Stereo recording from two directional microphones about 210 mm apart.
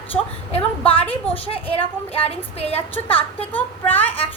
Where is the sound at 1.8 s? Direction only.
30° left (ahead or behind).